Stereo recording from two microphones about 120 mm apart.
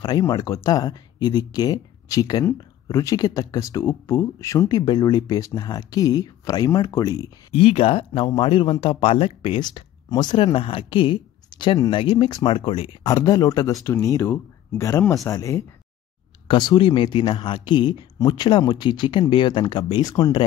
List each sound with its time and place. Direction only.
0.0 s speech: 35° left (ahead or behind)
7.5 s speech: 55° left (ahead or behind)
13.0 s speech: 30° left (ahead or behind)
16.4 s speech: 40° left (ahead or behind)